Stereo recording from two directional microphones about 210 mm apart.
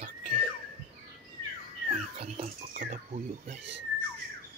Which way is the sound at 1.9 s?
30° right (ahead or behind).